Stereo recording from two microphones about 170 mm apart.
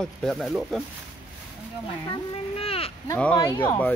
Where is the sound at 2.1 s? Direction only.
35° left (ahead or behind).